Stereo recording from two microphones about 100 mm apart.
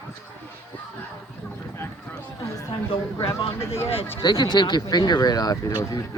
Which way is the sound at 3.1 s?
50° left (ahead or behind).